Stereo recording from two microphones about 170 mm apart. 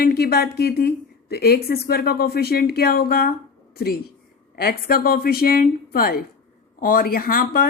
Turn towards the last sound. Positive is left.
turn(degrees=55)  # may be behind; listen again after turning